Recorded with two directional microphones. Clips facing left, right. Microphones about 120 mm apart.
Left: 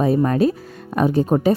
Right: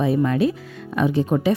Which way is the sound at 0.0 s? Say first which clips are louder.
Left 2 dB; 40° left (ahead or behind).